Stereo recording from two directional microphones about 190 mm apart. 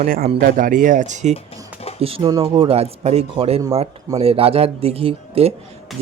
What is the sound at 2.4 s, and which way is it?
Speech, 30° right (ahead or behind).